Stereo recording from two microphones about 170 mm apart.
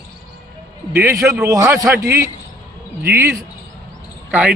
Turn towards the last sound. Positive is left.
turn(degrees=-10)  # may be behind; listen again after turning